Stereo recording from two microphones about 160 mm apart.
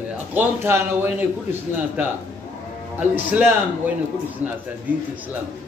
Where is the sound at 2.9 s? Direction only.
10° right (ahead or behind).